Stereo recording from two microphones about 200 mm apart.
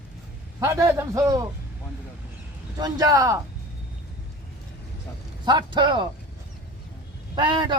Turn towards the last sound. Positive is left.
turn(degrees=-20)  # may be behind; listen again after turning